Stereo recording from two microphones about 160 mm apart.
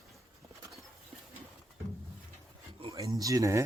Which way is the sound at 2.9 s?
20° right (ahead or behind).